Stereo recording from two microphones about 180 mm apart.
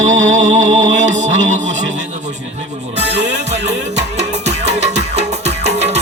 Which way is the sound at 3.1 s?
75° right (ahead or behind).